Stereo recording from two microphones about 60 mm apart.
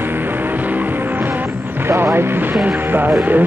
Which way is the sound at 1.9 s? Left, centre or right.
Right.